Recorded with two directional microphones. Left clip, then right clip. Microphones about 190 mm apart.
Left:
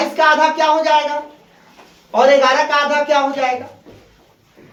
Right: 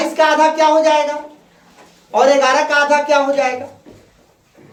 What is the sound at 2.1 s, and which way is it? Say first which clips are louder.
Speech: even; 35° right (ahead or behind).